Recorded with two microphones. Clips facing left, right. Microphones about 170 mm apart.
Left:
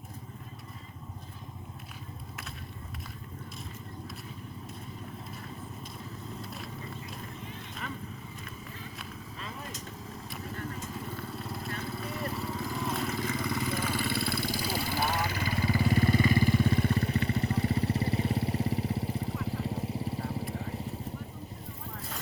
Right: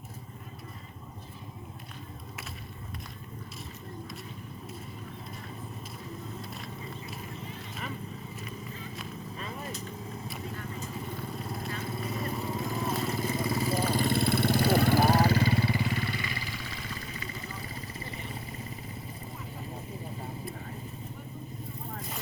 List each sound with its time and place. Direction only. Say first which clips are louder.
11.2 s vehicle: right 1 dB; centre (ahead or behind)
12.2 s vehicle: even; 20° right (ahead or behind)
15.6 s vehicle: left 4 dB; 40° left (ahead or behind); by 20.3 s 80° left